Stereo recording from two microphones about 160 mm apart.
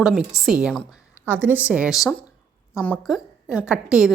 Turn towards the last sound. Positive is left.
turn(degrees=-5)  # may be behind; listen again after turning